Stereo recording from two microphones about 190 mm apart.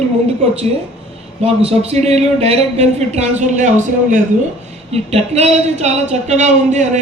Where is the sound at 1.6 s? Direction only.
35° right (ahead or behind).